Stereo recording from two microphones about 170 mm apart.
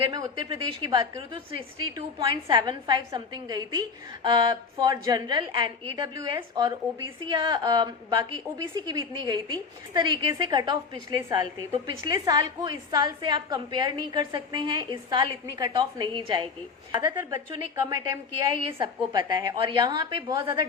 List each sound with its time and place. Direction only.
0.1 s a woman's voice: 25° right (ahead or behind)